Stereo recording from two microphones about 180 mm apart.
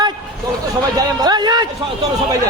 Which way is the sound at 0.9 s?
20° right (ahead or behind).